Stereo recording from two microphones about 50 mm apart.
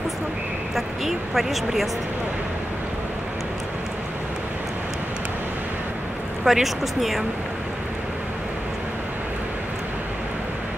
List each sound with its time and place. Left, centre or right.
0.7 s speech: centre
6.4 s speech: centre